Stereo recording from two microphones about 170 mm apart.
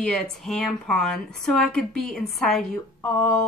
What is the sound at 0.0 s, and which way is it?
Speech, 5° left (ahead or behind).